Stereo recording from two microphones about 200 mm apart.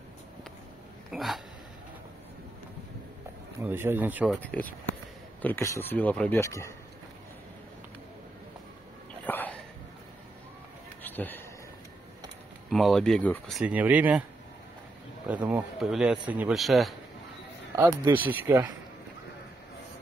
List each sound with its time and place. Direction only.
1.1 s speech: centre (ahead or behind)
3.6 s speech: 10° right (ahead or behind)
4.3 s speech: 5° left (ahead or behind)
9.2 s a sound: 10° left (ahead or behind)
11.0 s a sound: 10° left (ahead or behind)
12.6 s speech: centre (ahead or behind)
15.4 s speech: 5° right (ahead or behind)
17.7 s speech: 20° right (ahead or behind)
18.1 s speech: 10° right (ahead or behind)